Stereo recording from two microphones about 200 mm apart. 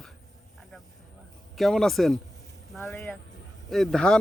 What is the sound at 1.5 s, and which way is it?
Speech, centre (ahead or behind).